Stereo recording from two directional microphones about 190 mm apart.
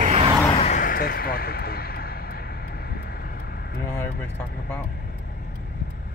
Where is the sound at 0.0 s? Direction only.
35° right (ahead or behind).